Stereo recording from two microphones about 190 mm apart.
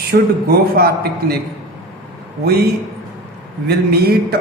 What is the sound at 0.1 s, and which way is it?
A man's voice, 55° right (ahead or behind).